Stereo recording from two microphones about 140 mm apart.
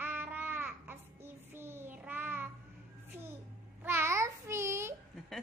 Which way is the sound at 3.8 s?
15° right (ahead or behind).